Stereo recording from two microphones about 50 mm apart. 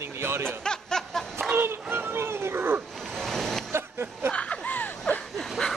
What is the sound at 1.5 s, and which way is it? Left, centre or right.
A child's voice, right.